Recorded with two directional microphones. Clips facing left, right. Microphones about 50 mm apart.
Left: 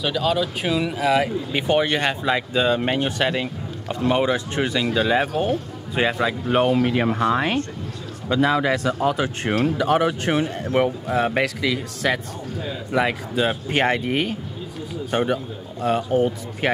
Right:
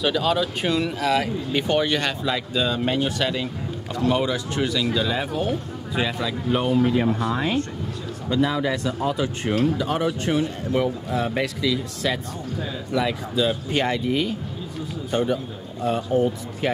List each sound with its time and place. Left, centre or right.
0.0 s speech: centre; by 6.7 s left
6.7 s speech: left
10.6 s speech: left
11.3 s speech: left
16.1 s speech: left
16.6 s speech: left